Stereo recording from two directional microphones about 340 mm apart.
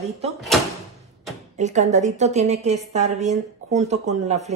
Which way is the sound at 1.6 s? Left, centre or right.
Right.